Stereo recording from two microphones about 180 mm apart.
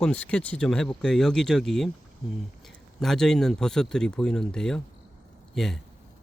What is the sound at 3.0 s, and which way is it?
Speech, centre (ahead or behind).